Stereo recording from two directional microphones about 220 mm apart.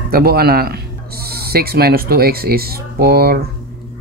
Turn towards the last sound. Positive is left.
turn(degrees=-45)  # may be behind; listen again after turning